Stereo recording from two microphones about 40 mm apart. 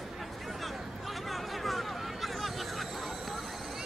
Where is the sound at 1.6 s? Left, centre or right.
Centre.